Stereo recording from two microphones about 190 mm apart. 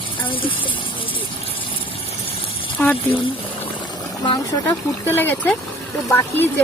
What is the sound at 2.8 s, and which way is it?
Speech, 10° left (ahead or behind).